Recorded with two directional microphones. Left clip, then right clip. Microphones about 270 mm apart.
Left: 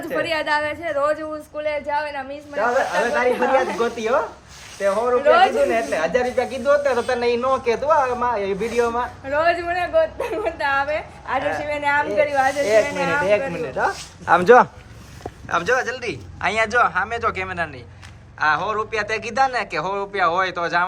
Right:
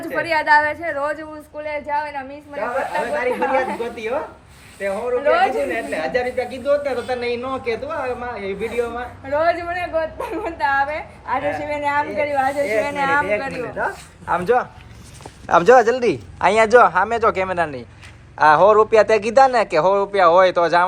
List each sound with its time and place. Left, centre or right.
0.2 s a woman's voice: centre
3.5 s a woman's voice: centre
4.8 s a woman's voice: centre
9.2 s a woman's voice: centre
12.8 s speech: centre
13.7 s a woman's voice: centre
14.3 s a man's voice: left
15.4 s a woman's voice: centre